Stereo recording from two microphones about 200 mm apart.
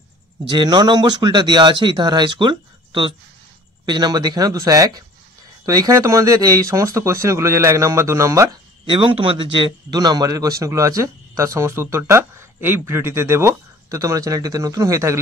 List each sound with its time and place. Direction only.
0.5 s speech: 20° right (ahead or behind)
8.9 s speech: 25° right (ahead or behind)